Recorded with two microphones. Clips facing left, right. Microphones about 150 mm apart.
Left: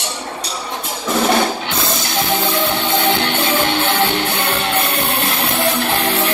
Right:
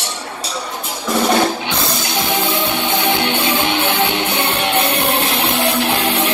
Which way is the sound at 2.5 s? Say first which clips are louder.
Left 1 dB; 20° right (ahead or behind).